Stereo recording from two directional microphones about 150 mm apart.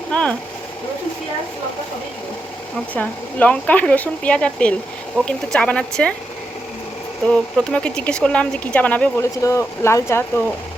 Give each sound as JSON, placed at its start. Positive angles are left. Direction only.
{"t": 0.1, "sound": "speech", "side_deg": 10}
{"t": 2.9, "sound": "speech", "side_deg": 10}
{"t": 7.3, "sound": "speech", "side_deg": 10}